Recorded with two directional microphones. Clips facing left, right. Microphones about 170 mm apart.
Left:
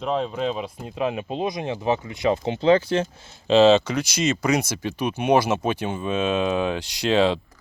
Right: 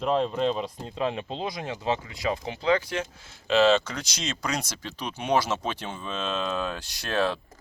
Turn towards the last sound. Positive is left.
turn(degrees=20)  # may be behind; listen again after turning